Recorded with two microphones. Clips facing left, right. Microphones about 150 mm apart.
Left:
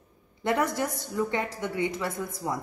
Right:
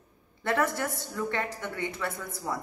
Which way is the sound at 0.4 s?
15° left (ahead or behind).